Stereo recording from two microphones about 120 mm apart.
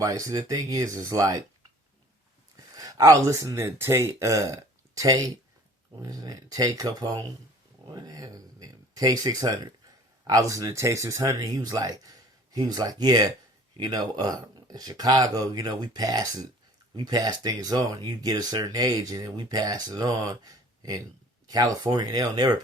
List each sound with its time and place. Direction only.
0.0 s speech: 30° right (ahead or behind)
2.6 s speech: 30° right (ahead or behind)